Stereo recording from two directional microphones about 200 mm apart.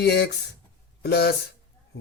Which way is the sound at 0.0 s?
55° left (ahead or behind).